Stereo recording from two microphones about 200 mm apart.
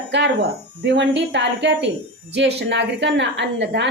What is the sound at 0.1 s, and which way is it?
A woman's voice, 60° right (ahead or behind).